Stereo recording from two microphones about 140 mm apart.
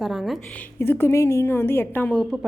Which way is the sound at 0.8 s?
15° left (ahead or behind).